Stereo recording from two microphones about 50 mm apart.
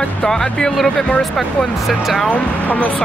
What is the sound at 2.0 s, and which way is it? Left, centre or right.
Speech, centre.